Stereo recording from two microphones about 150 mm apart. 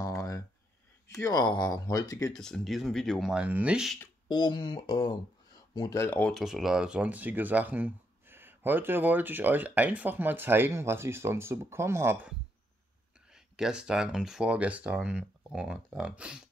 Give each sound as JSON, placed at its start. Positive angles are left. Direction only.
{"t": 1.0, "sound": "speech", "side_deg": 20}
{"t": 2.3, "sound": "speech", "side_deg": 5}
{"t": 4.3, "sound": "speech", "side_deg": 30}